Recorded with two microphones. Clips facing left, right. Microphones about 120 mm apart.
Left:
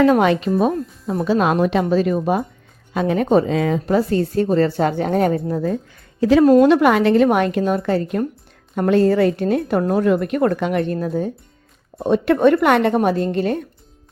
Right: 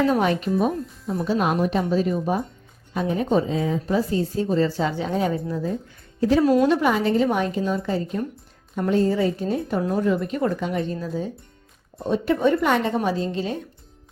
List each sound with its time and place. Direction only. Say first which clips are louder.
0.0 s a woman's voice: left 6 dB; 85° left; by 5.7 s 55° left (ahead or behind)
6.1 s speech: left 5 dB; 90° left
6.4 s a woman's voice: left 8 dB; 50° left (ahead or behind)
6.7 s a woman's voice: left 6 dB; 75° left (ahead or behind); by 11.3 s 55° left (ahead or behind)
11.9 s a woman's voice: left 6 dB; 65° left (ahead or behind)